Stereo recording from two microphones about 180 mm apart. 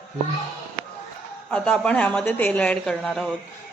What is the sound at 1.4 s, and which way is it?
A woman's voice, 5° left (ahead or behind).